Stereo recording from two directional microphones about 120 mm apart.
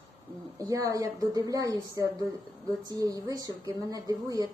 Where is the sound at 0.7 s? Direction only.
30° right (ahead or behind).